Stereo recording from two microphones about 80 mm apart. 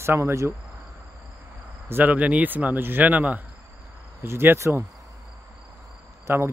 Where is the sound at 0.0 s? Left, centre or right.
Right.